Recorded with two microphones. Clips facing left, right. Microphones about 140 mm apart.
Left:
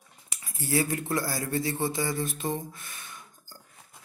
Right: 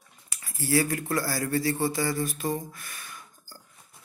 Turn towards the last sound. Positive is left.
turn(degrees=20)  # may be behind; listen again after turning